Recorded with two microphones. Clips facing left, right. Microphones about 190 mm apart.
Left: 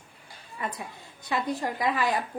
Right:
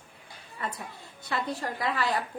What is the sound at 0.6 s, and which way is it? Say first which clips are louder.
A woman's voice: left 2 dB; 15° left (ahead or behind).